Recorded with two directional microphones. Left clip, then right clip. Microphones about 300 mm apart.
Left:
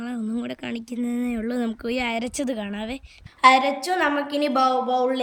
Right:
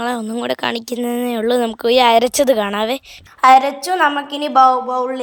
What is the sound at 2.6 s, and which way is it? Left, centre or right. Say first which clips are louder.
A woman's voice: right 14 dB; centre.